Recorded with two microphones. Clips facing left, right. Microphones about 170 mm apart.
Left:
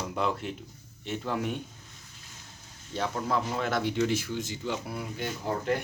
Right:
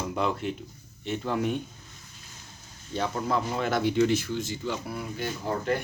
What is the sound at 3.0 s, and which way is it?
Speech, centre (ahead or behind).